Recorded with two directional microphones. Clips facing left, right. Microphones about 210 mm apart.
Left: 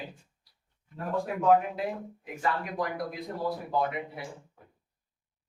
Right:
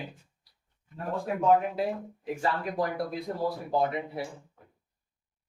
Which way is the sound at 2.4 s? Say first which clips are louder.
Right 1 dB; 30° right (ahead or behind).